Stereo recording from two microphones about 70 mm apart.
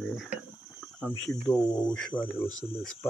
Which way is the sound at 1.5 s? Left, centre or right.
Left.